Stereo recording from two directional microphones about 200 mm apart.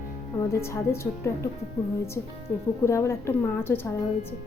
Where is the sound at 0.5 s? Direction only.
15° left (ahead or behind).